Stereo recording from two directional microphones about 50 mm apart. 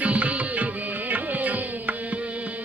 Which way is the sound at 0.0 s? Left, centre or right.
Right.